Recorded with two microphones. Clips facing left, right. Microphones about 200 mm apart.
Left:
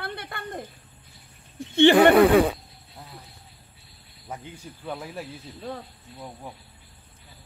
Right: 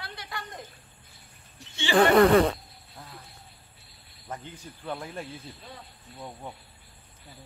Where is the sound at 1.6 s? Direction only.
55° left (ahead or behind).